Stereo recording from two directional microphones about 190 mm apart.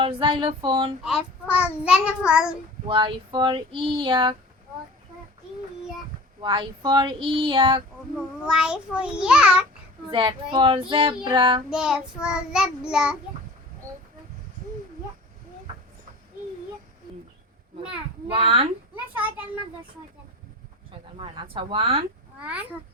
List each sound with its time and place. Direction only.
0.0 s child singing: 25° right (ahead or behind)
1.0 s a child's voice: 5° right (ahead or behind)
2.8 s child singing: 25° right (ahead or behind)
6.4 s child singing: 25° right (ahead or behind)
8.4 s a child's voice: 5° right (ahead or behind)
10.1 s child singing: 25° right (ahead or behind)
11.7 s a child's voice: 5° right (ahead or behind)
18.3 s child singing: 30° right (ahead or behind)
21.2 s child singing: 25° right (ahead or behind)